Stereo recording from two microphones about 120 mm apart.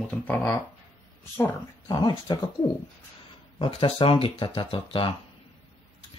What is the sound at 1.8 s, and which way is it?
Speech, 40° left (ahead or behind).